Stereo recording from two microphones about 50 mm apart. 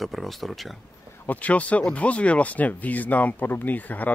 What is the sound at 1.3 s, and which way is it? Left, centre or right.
Speech, left.